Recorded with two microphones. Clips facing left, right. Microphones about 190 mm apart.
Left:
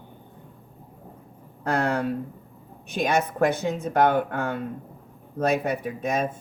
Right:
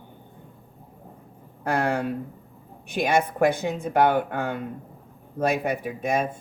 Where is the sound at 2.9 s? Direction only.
15° right (ahead or behind).